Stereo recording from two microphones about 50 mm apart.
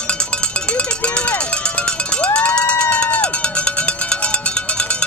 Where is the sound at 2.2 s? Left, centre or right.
Left.